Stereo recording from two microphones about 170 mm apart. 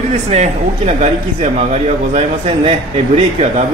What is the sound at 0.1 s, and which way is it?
A man's voice, 40° right (ahead or behind).